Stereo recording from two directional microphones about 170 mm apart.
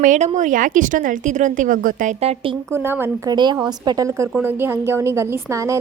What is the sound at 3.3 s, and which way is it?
A woman's voice, 25° right (ahead or behind).